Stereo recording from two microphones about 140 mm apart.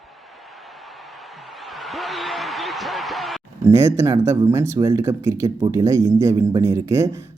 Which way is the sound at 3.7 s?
20° right (ahead or behind).